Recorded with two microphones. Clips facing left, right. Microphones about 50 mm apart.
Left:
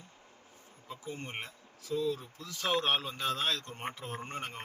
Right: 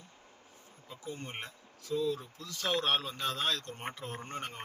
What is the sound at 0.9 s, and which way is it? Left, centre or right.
Insect, centre.